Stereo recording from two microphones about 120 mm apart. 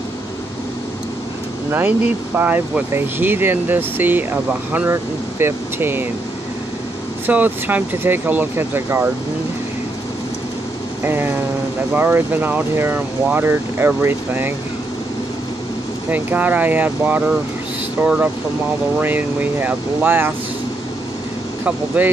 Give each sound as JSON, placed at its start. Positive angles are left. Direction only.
{"t": 1.7, "sound": "speech", "side_deg": -15}
{"t": 7.2, "sound": "speech", "side_deg": -15}
{"t": 11.1, "sound": "speech", "side_deg": -20}
{"t": 16.1, "sound": "speech", "side_deg": -15}
{"t": 21.6, "sound": "speech", "side_deg": -15}